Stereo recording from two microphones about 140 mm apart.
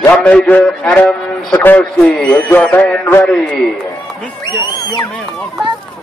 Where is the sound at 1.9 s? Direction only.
5° left (ahead or behind).